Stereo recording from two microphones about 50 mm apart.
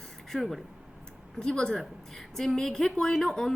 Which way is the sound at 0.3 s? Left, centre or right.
Centre.